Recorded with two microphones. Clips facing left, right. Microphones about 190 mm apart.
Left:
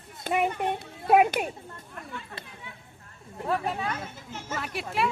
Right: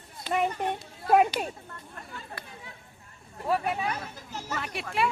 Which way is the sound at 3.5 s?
15° right (ahead or behind).